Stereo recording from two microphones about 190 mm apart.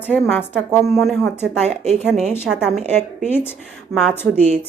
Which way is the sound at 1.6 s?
35° right (ahead or behind).